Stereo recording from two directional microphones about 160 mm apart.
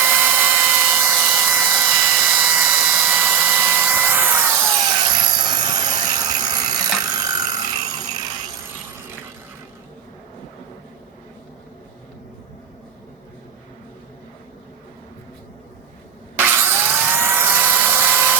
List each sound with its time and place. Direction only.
0.0 s tools: 10° right (ahead or behind)
5.2 s helicopter: 30° right (ahead or behind)
7.0 s clock: 25° right (ahead or behind)
16.4 s dental drill: 15° right (ahead or behind)